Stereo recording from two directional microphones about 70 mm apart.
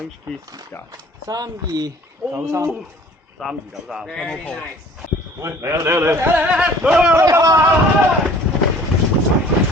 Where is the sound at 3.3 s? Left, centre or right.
Centre.